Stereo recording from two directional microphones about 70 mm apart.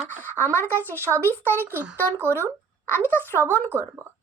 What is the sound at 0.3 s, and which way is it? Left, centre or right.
Speech, right.